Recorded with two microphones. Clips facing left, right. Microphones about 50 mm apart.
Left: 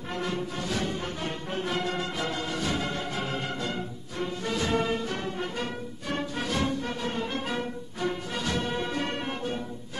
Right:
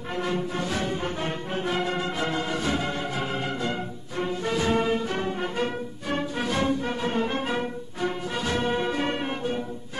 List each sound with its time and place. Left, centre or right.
0.1 s music: centre